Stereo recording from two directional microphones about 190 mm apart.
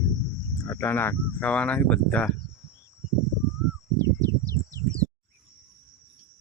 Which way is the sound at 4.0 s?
20° right (ahead or behind).